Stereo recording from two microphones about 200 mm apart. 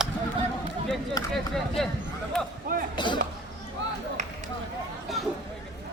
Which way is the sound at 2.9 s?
25° left (ahead or behind).